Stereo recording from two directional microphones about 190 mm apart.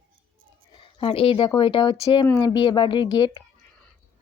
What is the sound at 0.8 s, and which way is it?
Speech, 25° left (ahead or behind).